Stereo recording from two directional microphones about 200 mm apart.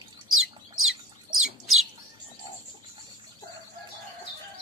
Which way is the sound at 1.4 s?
Centre (ahead or behind).